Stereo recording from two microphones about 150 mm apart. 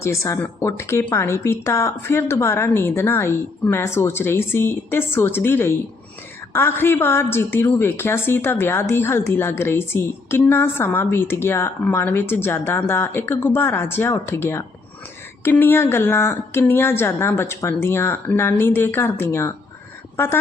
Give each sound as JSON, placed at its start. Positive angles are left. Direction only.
{"t": 0.0, "sound": "a woman's voice", "side_deg": 20}